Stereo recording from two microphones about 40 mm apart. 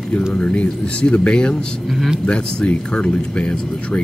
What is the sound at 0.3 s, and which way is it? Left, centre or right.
Speech, left.